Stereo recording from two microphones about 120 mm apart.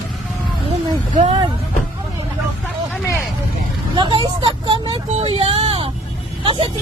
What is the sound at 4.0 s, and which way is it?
Vehicle, 40° right (ahead or behind).